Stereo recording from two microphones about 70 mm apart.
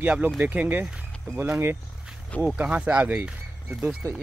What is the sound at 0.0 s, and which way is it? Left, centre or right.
Speech, right.